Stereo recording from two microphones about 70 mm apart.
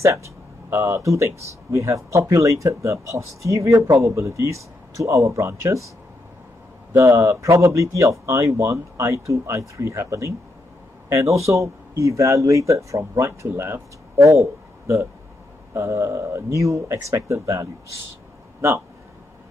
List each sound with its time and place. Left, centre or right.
0.7 s speech: right
7.0 s a man's voice: right